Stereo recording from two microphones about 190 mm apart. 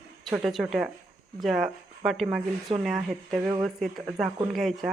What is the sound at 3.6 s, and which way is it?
Speech, centre (ahead or behind).